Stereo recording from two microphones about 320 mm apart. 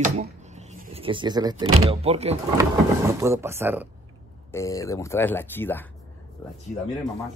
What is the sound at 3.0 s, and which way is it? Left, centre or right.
Speech, centre.